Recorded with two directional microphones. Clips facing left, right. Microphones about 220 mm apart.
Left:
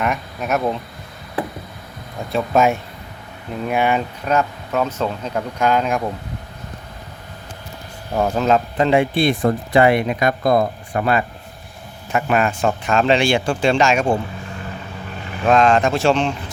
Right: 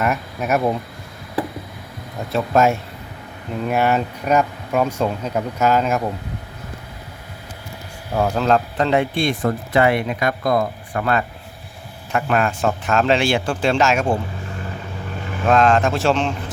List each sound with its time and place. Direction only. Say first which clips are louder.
0.0 s speech: right 1 dB; 5° right (ahead or behind)
2.3 s a man's voice: even; centre (ahead or behind)
8.1 s speech: even; 5° right (ahead or behind)
8.4 s speech: left 2 dB; 5° left (ahead or behind); by 11.1 s 25° left (ahead or behind)
12.1 s a man's voice: left 1 dB; 5° left (ahead or behind)
15.4 s a man's voice: left 1 dB; centre (ahead or behind)